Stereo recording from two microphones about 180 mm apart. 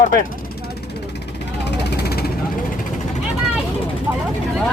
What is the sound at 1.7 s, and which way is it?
Vehicle, 65° left (ahead or behind).